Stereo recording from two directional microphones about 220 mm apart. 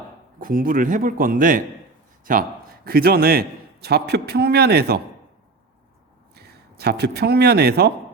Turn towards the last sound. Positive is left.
turn(degrees=-45)  # may be behind; listen again after turning